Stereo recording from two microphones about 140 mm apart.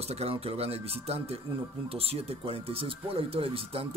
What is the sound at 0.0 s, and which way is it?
Speech, 50° right (ahead or behind).